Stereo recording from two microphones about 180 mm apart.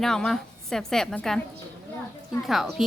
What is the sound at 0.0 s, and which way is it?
A woman's voice, 5° left (ahead or behind).